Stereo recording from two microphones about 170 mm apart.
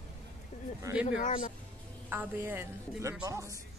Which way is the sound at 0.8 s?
15° right (ahead or behind).